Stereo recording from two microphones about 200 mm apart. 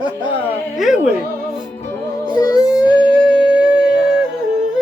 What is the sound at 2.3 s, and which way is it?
Music, 20° left (ahead or behind).